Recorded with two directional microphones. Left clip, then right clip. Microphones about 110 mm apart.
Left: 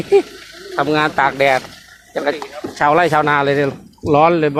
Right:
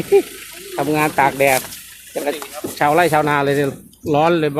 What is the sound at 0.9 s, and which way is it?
Speech, 20° right (ahead or behind).